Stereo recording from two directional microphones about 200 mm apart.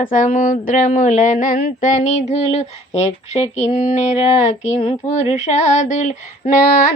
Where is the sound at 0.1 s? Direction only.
40° left (ahead or behind).